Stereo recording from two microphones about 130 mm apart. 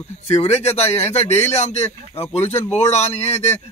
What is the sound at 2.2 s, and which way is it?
Speech, 15° left (ahead or behind).